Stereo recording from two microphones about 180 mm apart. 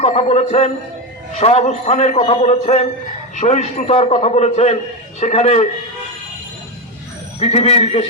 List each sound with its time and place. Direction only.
0.0 s a man's voice: 35° left (ahead or behind)
7.3 s a man's voice: 35° left (ahead or behind)